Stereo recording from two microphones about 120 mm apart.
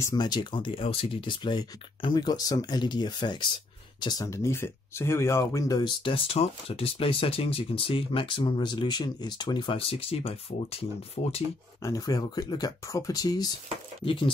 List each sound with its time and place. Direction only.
0.0 s speech: 35° left (ahead or behind); by 10.9 s 55° left (ahead or behind)
11.2 s speech: 65° left (ahead or behind)
11.8 s speech: 30° left (ahead or behind)
14.0 s speech: 45° left (ahead or behind)